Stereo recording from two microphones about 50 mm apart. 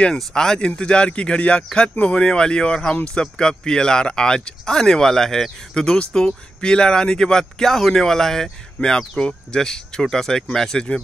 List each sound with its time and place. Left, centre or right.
0.0 s speech: centre